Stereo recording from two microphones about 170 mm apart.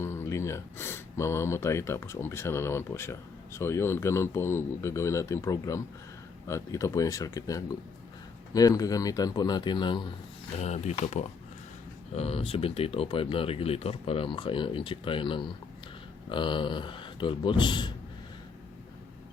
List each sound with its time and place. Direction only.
0.0 s speech: 15° left (ahead or behind)
10.6 s speech: 40° left (ahead or behind); by 17.9 s 25° left (ahead or behind)